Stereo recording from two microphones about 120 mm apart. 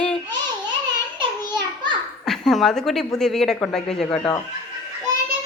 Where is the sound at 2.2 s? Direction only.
5° left (ahead or behind).